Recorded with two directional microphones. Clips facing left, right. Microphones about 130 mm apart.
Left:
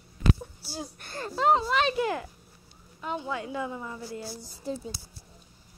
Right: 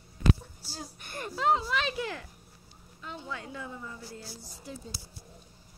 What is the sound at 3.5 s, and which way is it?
Speech, 90° left.